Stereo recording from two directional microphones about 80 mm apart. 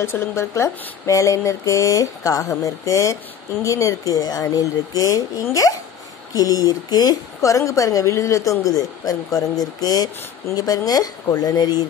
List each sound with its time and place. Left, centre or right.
0.0 s a woman's voice: left